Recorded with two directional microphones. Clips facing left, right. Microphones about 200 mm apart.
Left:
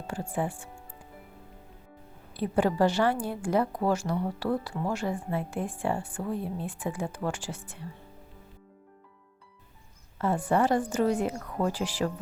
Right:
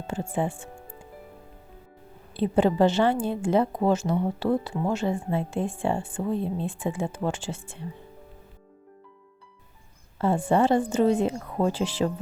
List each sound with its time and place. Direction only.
0.1 s a woman's voice: 25° right (ahead or behind)
2.3 s a woman's voice: 25° right (ahead or behind)
10.2 s a woman's voice: 25° right (ahead or behind)